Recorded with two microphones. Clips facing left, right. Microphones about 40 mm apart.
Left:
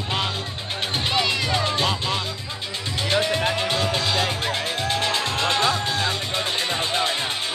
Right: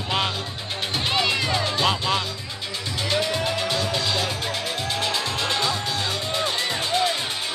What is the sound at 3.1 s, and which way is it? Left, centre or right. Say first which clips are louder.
Music: left 2 dB; left.